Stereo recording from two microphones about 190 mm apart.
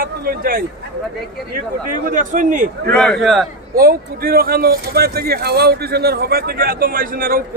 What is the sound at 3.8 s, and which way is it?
Speech, 50° right (ahead or behind).